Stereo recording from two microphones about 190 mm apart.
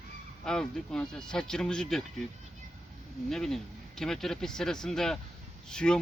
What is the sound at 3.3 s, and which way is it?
Speech, centre (ahead or behind).